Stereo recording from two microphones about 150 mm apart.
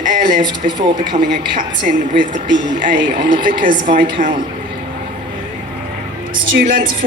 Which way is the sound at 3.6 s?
65° right (ahead or behind).